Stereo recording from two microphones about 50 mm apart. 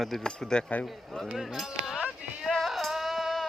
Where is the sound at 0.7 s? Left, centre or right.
Left.